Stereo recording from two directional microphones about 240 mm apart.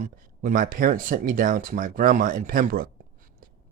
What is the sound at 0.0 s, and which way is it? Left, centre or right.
Speech, right.